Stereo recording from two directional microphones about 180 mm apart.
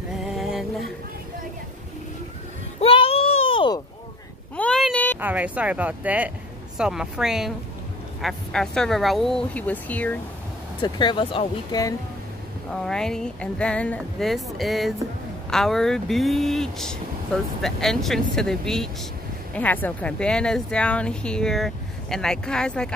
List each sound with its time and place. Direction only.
0.4 s music: centre (ahead or behind)
2.8 s child singing: 30° left (ahead or behind)
3.5 s a sound: 25° left (ahead or behind)
4.6 s a sound: 5° left (ahead or behind)
5.2 s speech: 10° right (ahead or behind); by 10.1 s 10° left (ahead or behind)
10.8 s speech: 25° left (ahead or behind)
12.7 s speech: 5° left (ahead or behind)